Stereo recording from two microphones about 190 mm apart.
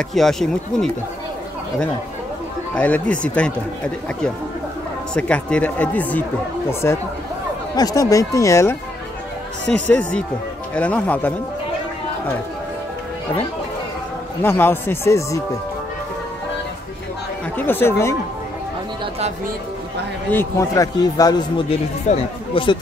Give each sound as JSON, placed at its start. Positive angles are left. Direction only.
{"t": 0.1, "sound": "speech", "side_deg": 0}
{"t": 2.7, "sound": "speech", "side_deg": 10}
{"t": 5.1, "sound": "speech", "side_deg": 5}
{"t": 9.8, "sound": "speech", "side_deg": 10}
{"t": 14.4, "sound": "speech", "side_deg": 10}
{"t": 17.6, "sound": "speech", "side_deg": 10}
{"t": 20.2, "sound": "speech", "side_deg": 15}